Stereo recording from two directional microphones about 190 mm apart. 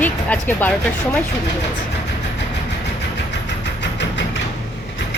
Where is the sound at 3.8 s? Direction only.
65° left (ahead or behind).